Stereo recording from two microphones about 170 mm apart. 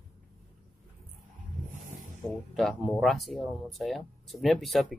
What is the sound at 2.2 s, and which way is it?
Speech, centre (ahead or behind).